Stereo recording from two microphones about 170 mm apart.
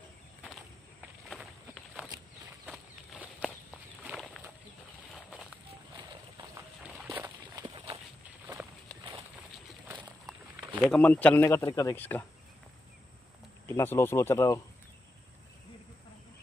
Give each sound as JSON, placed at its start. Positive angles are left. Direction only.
{"t": 2.6, "sound": "a sound", "side_deg": -10}
{"t": 3.3, "sound": "walk", "side_deg": 0}
{"t": 5.9, "sound": "a sound", "side_deg": -20}
{"t": 7.1, "sound": "walk", "side_deg": -20}
{"t": 10.8, "sound": "speech", "side_deg": 5}
{"t": 13.7, "sound": "speech", "side_deg": 15}